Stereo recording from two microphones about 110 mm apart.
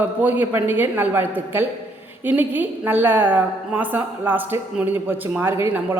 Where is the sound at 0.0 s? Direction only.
15° right (ahead or behind).